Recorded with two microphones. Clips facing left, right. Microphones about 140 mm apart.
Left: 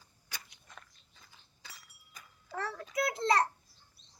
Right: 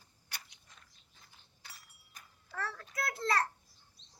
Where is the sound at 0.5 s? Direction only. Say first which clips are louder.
Left 8 dB; 55° left (ahead or behind).